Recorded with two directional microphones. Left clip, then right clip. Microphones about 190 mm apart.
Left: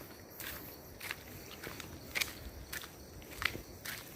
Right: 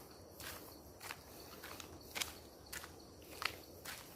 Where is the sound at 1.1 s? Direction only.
Centre (ahead or behind).